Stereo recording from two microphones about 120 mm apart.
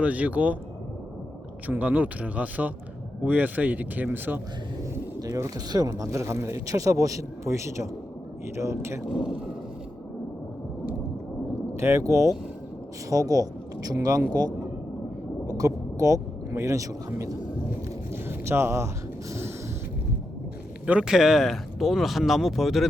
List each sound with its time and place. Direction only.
0.0 s speech: 10° right (ahead or behind)
1.6 s speech: 15° right (ahead or behind)
5.2 s speech: 30° right (ahead or behind)
9.0 s speech: centre (ahead or behind)
11.7 s speech: 25° right (ahead or behind)
15.4 s speech: 30° right (ahead or behind)
18.1 s a sound: 20° right (ahead or behind)
20.8 s speech: 10° right (ahead or behind)